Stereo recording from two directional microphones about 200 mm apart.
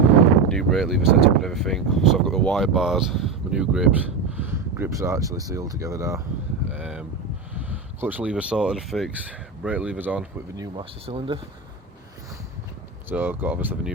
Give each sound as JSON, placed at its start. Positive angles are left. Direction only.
{"t": 0.4, "sound": "speech", "side_deg": 0}
{"t": 6.7, "sound": "a sound", "side_deg": -5}
{"t": 7.6, "sound": "speech", "side_deg": -10}
{"t": 13.1, "sound": "speech", "side_deg": -10}